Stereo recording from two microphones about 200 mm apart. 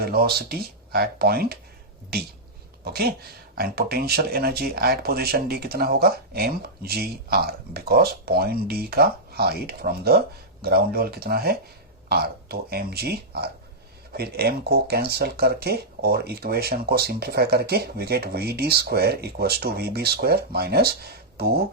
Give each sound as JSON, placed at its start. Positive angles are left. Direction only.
{"t": 0.0, "sound": "speech", "side_deg": -50}
{"t": 2.8, "sound": "speech", "side_deg": -50}